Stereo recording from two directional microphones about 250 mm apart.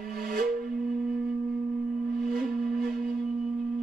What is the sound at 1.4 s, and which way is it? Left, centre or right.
Singing bowl, centre.